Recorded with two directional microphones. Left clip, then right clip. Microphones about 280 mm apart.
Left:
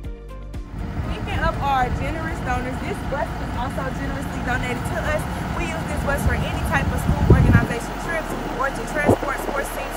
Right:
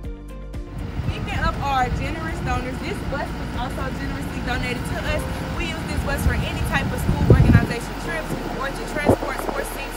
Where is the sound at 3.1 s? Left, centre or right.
Centre.